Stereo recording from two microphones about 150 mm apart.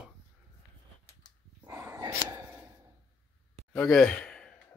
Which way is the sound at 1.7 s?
20° right (ahead or behind).